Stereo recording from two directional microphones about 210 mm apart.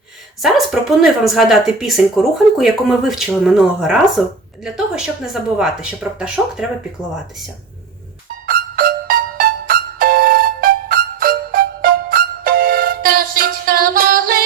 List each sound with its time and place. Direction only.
0.4 s speech: centre (ahead or behind)
8.4 s music: 45° right (ahead or behind)